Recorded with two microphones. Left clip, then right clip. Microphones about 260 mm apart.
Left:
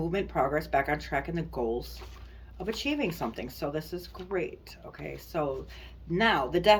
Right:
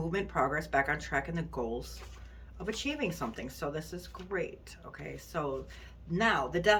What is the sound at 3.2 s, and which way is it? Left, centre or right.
Speech, right.